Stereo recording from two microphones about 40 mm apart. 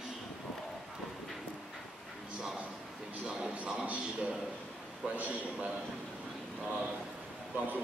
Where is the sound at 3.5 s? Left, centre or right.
Right.